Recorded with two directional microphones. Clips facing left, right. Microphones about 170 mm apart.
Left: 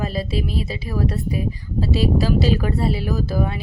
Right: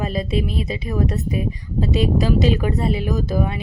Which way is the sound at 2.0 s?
35° left (ahead or behind).